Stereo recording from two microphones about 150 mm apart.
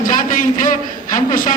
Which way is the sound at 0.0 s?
65° left (ahead or behind).